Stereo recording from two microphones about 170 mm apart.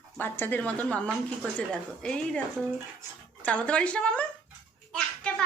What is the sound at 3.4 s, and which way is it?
Speech, 5° left (ahead or behind).